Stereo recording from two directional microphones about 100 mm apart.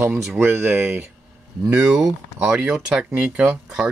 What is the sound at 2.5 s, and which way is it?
Speech, 10° right (ahead or behind).